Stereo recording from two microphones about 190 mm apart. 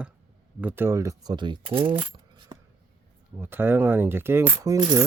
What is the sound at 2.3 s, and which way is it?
Coin, 25° right (ahead or behind).